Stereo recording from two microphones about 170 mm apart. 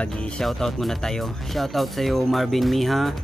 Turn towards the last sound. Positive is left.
turn(degrees=0)  # may be behind; listen again after turning